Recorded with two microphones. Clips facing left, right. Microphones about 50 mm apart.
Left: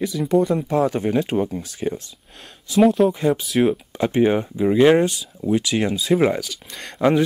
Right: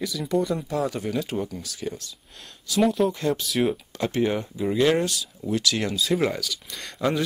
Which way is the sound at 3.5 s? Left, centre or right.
Centre.